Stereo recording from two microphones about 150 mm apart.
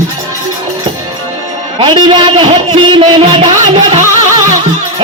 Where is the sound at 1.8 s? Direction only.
35° right (ahead or behind).